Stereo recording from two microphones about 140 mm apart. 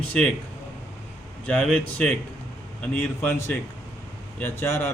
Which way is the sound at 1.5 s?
10° left (ahead or behind).